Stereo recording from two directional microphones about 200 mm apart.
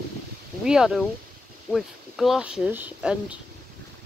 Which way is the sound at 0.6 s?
5° right (ahead or behind).